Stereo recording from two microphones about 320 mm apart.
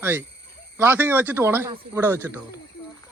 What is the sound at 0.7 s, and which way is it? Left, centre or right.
Speech, centre.